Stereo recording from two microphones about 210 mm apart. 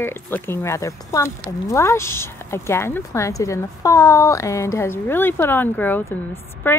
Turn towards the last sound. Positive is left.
turn(degrees=10)  # may be behind; listen again after turning